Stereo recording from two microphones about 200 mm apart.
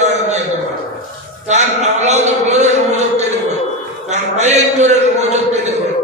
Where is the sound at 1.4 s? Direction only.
35° right (ahead or behind).